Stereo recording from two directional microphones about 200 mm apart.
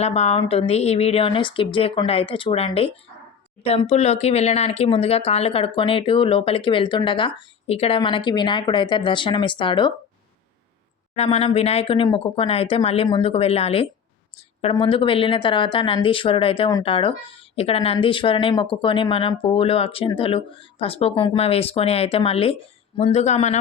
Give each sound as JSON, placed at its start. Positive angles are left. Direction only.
{"t": 0.0, "sound": "speech", "side_deg": 30}
{"t": 11.1, "sound": "speech", "side_deg": 30}